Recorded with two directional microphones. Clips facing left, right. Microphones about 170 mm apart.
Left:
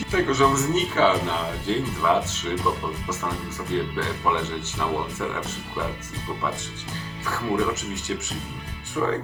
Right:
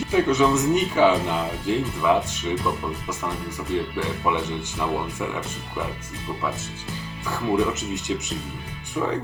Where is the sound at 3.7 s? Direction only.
15° right (ahead or behind).